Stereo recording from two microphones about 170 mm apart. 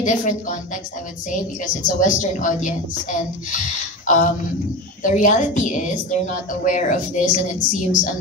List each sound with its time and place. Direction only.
0.0 s speech: 45° left (ahead or behind)
1.8 s speech: 50° left (ahead or behind)
4.0 s speech: 50° left (ahead or behind)